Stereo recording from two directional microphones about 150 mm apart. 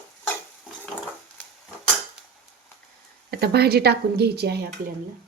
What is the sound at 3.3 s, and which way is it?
Speech, 90° right.